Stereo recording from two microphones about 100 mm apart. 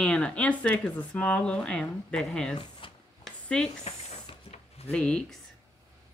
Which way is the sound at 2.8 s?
60° left (ahead or behind).